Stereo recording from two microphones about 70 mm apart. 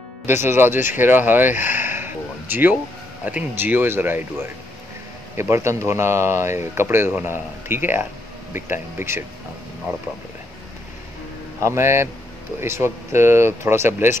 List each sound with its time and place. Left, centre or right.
0.3 s speech: right
5.3 s speech: right
11.6 s speech: right